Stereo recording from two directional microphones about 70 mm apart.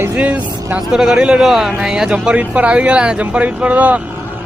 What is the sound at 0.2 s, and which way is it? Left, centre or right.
A man's voice, centre.